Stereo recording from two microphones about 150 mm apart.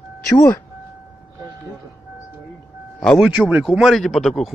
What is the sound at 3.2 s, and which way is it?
Speech, 10° right (ahead or behind).